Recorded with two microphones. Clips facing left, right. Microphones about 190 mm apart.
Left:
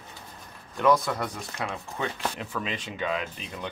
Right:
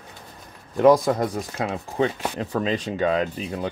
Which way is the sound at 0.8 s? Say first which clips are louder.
Right 7 dB; 35° right (ahead or behind).